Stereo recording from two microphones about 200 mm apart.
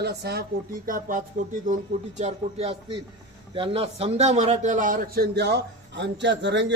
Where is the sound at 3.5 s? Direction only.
25° right (ahead or behind); by 6.6 s 60° right (ahead or behind).